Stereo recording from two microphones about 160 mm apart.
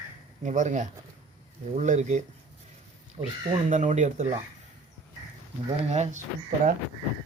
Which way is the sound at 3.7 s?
50° right (ahead or behind).